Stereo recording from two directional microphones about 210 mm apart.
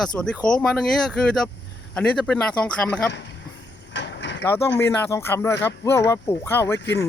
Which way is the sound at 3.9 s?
55° left (ahead or behind).